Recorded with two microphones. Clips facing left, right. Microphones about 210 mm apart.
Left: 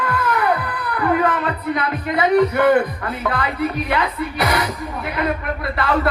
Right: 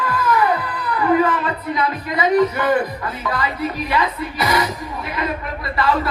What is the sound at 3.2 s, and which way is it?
Speech, 55° left (ahead or behind).